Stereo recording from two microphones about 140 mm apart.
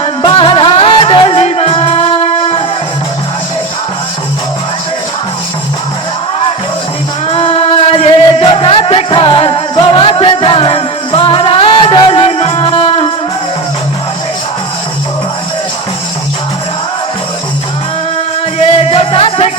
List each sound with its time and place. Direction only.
0.2 s music: 35° left (ahead or behind)
7.3 s music: 45° left (ahead or behind)
18.7 s music: 45° left (ahead or behind)